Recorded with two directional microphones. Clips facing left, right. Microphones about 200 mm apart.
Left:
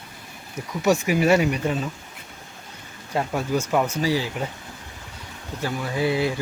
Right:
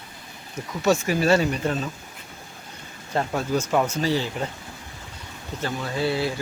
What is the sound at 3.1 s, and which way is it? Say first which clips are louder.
Speech: even; 5° left (ahead or behind).